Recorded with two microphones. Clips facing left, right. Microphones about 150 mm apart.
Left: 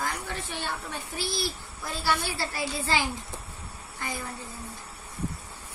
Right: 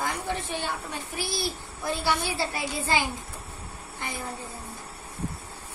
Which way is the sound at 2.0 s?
20° right (ahead or behind).